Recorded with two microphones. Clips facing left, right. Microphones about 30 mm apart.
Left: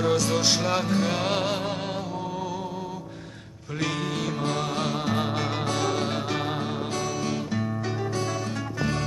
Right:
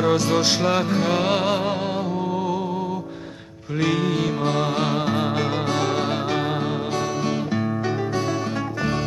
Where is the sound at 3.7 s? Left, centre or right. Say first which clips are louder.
Right 7 dB; centre.